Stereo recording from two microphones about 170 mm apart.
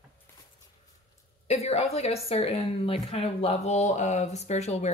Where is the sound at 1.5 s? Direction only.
40° left (ahead or behind).